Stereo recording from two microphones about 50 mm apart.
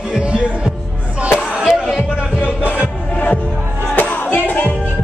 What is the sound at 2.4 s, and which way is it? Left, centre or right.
Music, right.